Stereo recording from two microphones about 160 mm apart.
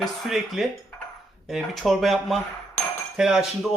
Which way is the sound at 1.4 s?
Centre (ahead or behind).